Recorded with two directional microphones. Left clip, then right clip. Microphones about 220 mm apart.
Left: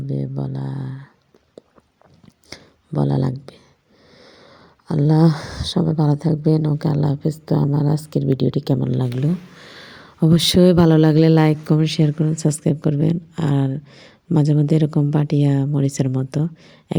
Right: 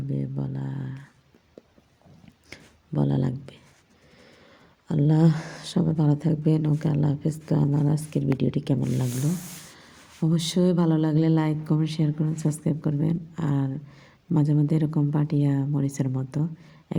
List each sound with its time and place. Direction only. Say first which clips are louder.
0.1 s speech: left 6 dB; 10° left (ahead or behind)
2.5 s a sound: left 6 dB; 10° left (ahead or behind)
4.9 s speech: left 6 dB; 10° left (ahead or behind)
9.2 s speech: left 6 dB; 35° left (ahead or behind)